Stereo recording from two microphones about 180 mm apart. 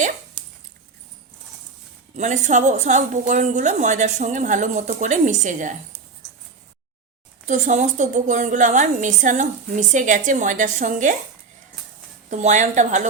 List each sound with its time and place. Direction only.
2.1 s a woman's voice: 40° right (ahead or behind)
7.4 s a woman's voice: 40° right (ahead or behind)
12.3 s a woman's voice: 40° right (ahead or behind)